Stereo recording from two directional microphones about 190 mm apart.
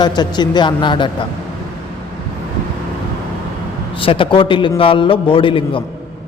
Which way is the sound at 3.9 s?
30° left (ahead or behind).